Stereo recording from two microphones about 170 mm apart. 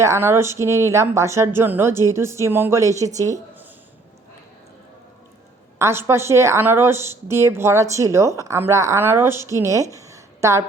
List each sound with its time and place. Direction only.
0.0 s speech: 15° right (ahead or behind)
5.8 s speech: 15° right (ahead or behind)
9.9 s a sound: 20° right (ahead or behind)